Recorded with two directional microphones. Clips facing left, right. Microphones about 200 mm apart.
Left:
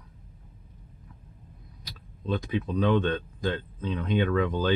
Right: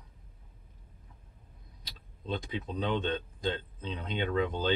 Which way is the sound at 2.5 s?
25° right (ahead or behind).